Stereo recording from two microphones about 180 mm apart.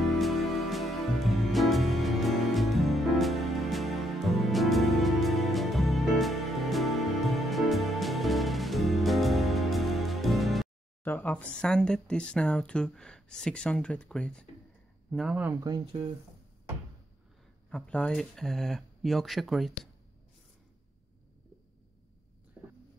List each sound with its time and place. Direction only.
0.0 s music: centre (ahead or behind)
11.1 s speech: 10° left (ahead or behind)
15.5 s speech: 20° right (ahead or behind)
17.6 s speech: 5° left (ahead or behind)